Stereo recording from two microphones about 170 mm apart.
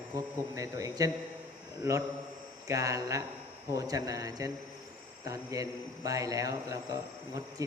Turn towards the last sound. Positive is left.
turn(degrees=-20)  # may be behind; listen again after turning